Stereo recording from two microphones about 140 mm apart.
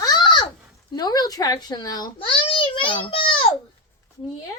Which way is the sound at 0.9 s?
30° left (ahead or behind).